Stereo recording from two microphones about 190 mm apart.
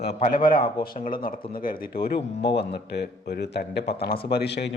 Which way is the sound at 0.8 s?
45° left (ahead or behind).